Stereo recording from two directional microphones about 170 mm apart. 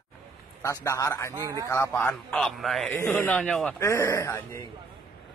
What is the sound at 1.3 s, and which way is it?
Speech, 20° right (ahead or behind).